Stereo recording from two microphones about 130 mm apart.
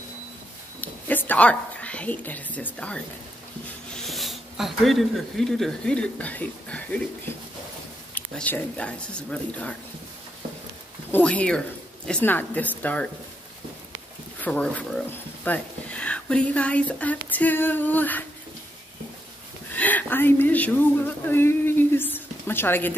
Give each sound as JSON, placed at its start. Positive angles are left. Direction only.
{"t": 0.7, "sound": "a sound", "side_deg": 15}
{"t": 3.9, "sound": "speech", "side_deg": 0}
{"t": 8.1, "sound": "speech", "side_deg": 10}
{"t": 11.1, "sound": "speech", "side_deg": 10}
{"t": 14.4, "sound": "speech", "side_deg": 10}
{"t": 19.7, "sound": "speech", "side_deg": 10}